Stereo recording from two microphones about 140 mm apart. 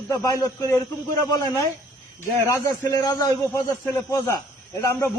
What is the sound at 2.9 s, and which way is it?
A man's voice, 25° left (ahead or behind).